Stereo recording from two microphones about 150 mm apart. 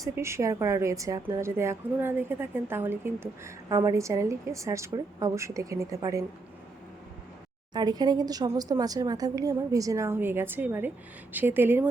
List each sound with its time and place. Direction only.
0.0 s a woman's voice: 20° right (ahead or behind)
7.7 s a woman's voice: 30° right (ahead or behind)